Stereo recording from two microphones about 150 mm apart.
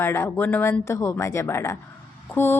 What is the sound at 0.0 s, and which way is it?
Speech, 15° left (ahead or behind).